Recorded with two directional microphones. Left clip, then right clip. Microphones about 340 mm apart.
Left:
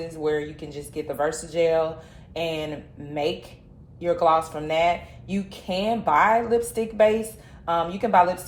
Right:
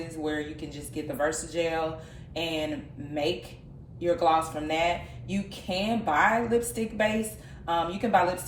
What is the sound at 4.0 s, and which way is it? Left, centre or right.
Speech, left.